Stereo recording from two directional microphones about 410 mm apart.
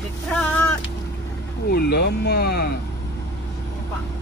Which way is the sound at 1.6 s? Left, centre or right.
Left.